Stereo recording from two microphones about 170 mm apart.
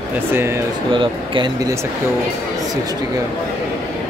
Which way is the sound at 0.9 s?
25° right (ahead or behind).